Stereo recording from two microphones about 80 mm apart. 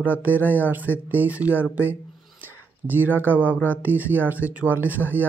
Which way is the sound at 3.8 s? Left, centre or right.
Right.